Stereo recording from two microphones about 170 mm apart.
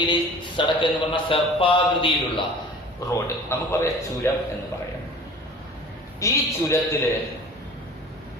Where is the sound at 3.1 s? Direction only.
15° left (ahead or behind).